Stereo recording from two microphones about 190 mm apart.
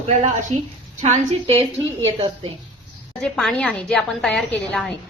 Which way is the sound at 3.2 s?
5° left (ahead or behind).